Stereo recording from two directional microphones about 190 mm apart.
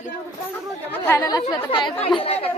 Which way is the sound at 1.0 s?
10° left (ahead or behind).